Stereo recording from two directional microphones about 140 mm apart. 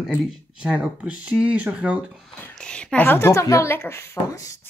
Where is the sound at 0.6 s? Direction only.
5° right (ahead or behind).